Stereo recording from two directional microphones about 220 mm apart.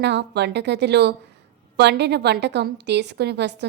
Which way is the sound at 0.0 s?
50° right (ahead or behind).